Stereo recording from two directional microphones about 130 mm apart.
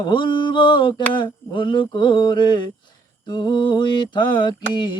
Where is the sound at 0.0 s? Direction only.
35° left (ahead or behind).